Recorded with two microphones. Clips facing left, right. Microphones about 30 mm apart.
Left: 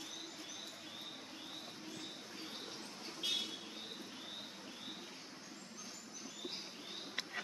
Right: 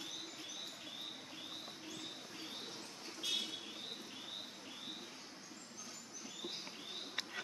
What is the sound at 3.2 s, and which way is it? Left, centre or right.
Vehicle, left.